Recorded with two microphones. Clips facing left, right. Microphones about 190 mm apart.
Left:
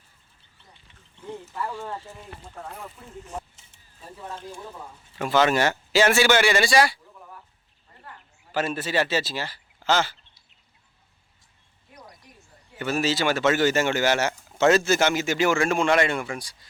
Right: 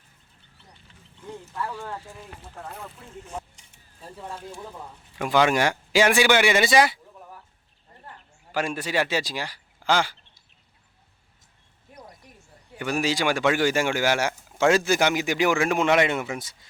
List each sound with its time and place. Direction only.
1.2 s speech: 10° left (ahead or behind)
2.6 s speech: centre (ahead or behind); by 7.0 s 20° right (ahead or behind)
8.5 s speech: 10° right (ahead or behind)
12.7 s speech: 15° right (ahead or behind)